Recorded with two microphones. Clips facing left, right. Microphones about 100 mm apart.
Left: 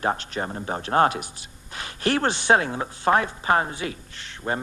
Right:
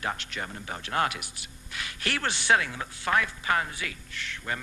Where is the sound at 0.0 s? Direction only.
35° left (ahead or behind).